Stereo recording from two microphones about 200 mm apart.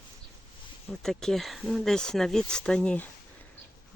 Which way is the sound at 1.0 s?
Centre (ahead or behind).